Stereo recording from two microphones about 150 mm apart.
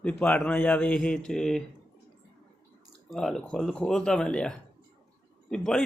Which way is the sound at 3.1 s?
Centre (ahead or behind).